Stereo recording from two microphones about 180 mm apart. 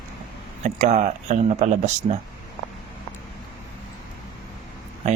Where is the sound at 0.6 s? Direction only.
40° right (ahead or behind).